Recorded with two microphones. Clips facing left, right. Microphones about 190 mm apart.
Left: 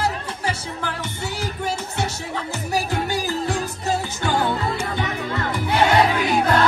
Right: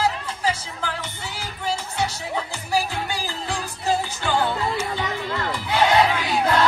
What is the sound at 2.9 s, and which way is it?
Music, 45° left (ahead or behind).